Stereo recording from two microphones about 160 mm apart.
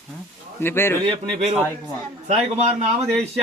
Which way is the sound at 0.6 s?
15° left (ahead or behind).